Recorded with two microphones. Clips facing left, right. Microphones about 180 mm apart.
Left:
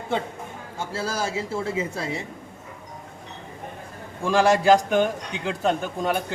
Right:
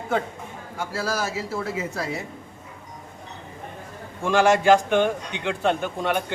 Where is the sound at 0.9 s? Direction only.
30° left (ahead or behind).